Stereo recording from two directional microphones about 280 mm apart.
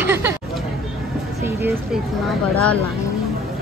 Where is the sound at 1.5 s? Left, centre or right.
Centre.